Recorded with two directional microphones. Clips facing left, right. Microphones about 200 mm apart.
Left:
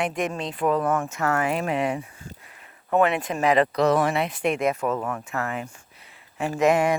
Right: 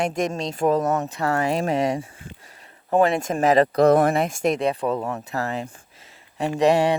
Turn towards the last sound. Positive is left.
turn(degrees=-35)  # may be behind; listen again after turning